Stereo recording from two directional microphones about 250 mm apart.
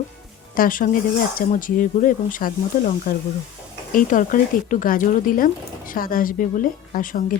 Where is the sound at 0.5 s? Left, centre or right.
Left.